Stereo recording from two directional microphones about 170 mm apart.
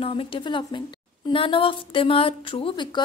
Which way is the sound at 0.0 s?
30° left (ahead or behind).